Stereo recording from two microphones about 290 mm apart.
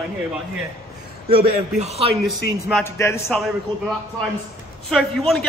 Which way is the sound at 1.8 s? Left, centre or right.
Right.